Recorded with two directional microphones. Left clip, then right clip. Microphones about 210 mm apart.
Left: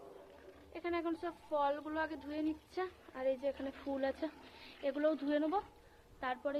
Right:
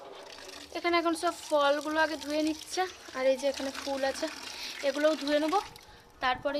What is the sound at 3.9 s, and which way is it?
A woman's voice, 10° right (ahead or behind).